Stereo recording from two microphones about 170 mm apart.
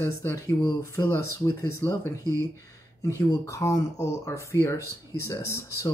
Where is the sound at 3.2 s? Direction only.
15° left (ahead or behind).